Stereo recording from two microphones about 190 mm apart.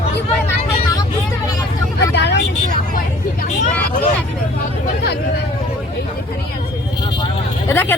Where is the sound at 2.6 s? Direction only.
45° left (ahead or behind).